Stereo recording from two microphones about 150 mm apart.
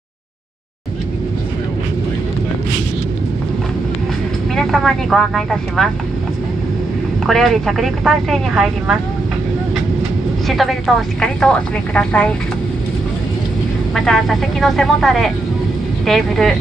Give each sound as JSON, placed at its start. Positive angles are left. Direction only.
{"t": 4.6, "sound": "speech", "side_deg": 0}
{"t": 7.2, "sound": "speech", "side_deg": 0}
{"t": 10.5, "sound": "speech", "side_deg": 0}
{"t": 13.9, "sound": "speech", "side_deg": 0}